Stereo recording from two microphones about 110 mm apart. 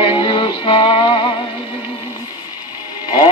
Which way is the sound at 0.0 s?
50° left (ahead or behind).